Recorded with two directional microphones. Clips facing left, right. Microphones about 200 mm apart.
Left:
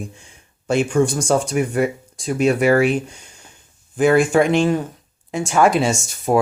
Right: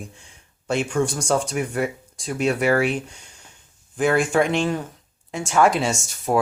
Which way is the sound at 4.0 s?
10° left (ahead or behind).